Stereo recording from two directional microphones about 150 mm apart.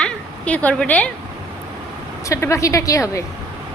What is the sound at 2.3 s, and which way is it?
Speech, 20° left (ahead or behind).